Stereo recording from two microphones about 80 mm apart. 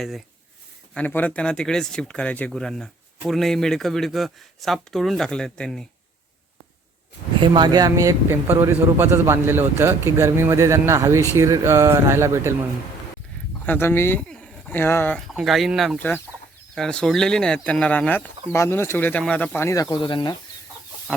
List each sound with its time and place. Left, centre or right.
0.9 s speech: centre
2.5 s speech: centre
7.4 s speech: right
8.5 s speech: right
13.7 s speech: left
14.2 s a sound: centre
14.8 s speech: left
15.3 s speech: centre
16.0 s speech: centre
16.7 s speech: centre
18.5 s speech: left
19.5 s speech: left
20.0 s speech: left
21.1 s speech: centre